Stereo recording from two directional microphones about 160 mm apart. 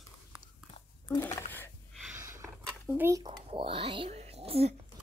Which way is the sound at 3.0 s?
20° right (ahead or behind).